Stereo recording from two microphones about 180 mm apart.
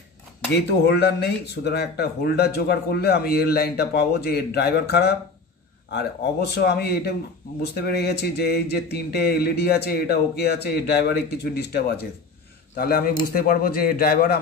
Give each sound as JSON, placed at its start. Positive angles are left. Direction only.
{"t": 0.8, "sound": "speech", "side_deg": 65}